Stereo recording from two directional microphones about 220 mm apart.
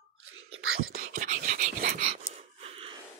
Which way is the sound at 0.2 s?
70° right (ahead or behind).